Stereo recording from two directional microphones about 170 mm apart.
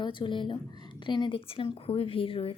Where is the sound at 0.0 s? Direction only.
30° left (ahead or behind).